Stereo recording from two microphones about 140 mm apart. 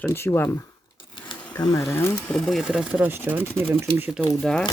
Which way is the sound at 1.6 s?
25° left (ahead or behind).